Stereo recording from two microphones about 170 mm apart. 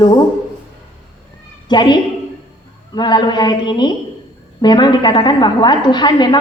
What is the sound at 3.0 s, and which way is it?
A woman's voice, 25° left (ahead or behind).